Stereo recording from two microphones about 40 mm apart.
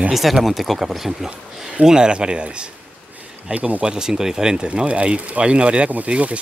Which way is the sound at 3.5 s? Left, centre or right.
Right.